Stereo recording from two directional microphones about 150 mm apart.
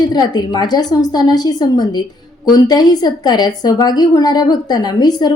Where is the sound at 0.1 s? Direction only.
25° left (ahead or behind).